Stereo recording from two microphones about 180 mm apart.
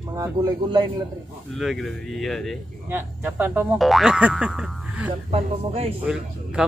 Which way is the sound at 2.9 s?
10° right (ahead or behind).